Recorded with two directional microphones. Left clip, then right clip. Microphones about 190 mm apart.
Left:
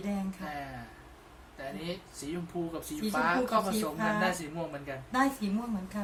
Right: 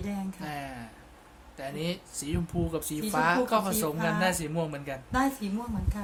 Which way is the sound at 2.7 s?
55° right (ahead or behind).